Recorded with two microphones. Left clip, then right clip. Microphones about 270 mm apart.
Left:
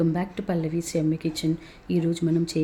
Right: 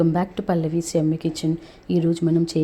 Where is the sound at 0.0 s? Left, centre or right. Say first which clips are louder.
Right 5 dB; centre.